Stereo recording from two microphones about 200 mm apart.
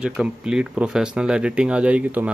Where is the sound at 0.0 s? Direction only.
5° right (ahead or behind).